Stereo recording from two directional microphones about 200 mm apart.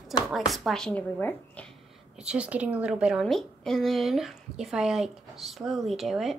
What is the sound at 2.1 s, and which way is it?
Speech, 5° right (ahead or behind).